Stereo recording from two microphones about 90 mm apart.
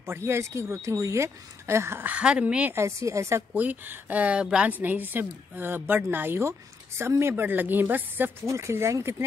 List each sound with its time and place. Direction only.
0.0 s speech: 30° right (ahead or behind)
2.1 s speech: 15° right (ahead or behind)
2.7 s speech: 30° right (ahead or behind)
3.5 s speech: 20° right (ahead or behind)